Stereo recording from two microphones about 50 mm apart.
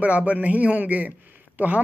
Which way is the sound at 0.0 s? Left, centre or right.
Right.